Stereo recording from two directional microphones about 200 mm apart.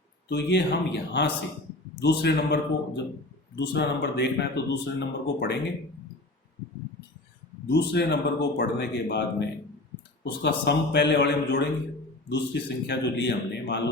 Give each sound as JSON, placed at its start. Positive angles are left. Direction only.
{"t": 0.3, "sound": "speech", "side_deg": 60}
{"t": 7.7, "sound": "speech", "side_deg": 55}
{"t": 10.2, "sound": "speech", "side_deg": 60}